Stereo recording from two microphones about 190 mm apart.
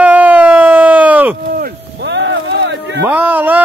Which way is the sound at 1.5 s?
60° right (ahead or behind).